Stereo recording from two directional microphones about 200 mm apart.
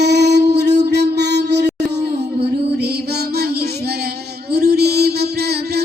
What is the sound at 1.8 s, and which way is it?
Music, 55° right (ahead or behind).